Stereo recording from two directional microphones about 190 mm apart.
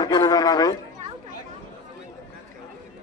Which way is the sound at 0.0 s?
20° left (ahead or behind).